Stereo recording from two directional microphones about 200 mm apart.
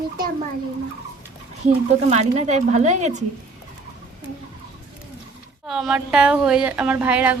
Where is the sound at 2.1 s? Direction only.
35° right (ahead or behind).